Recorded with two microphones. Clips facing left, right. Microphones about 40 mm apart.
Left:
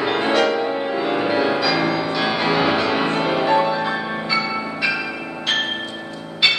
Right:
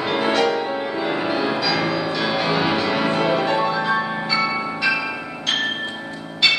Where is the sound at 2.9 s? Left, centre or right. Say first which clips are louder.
Even; left.